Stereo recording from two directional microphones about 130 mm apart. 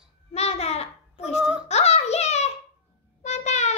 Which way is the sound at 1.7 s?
55° left (ahead or behind).